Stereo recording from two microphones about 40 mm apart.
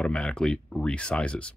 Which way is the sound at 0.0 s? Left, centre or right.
Left.